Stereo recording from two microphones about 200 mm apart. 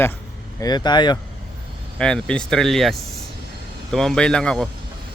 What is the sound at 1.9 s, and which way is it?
Speech, 5° left (ahead or behind).